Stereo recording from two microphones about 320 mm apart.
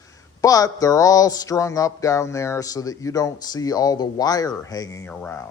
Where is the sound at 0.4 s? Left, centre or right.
Centre.